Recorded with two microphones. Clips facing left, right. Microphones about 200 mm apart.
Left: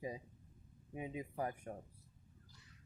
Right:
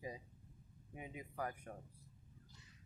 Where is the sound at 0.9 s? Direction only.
25° left (ahead or behind).